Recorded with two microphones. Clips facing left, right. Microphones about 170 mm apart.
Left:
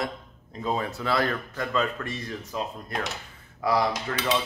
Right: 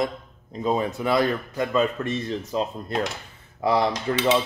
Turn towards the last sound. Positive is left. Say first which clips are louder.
# right 5 dB
turn(degrees=-25)  # may be behind; listen again after turning